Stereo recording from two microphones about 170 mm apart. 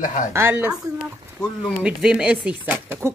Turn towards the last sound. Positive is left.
turn(degrees=-10)  # may be behind; listen again after turning